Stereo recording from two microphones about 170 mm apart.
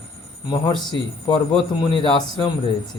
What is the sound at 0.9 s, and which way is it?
A man's voice, 25° left (ahead or behind).